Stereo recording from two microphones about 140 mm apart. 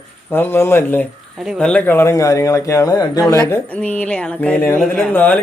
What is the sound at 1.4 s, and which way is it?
Speech, 5° left (ahead or behind).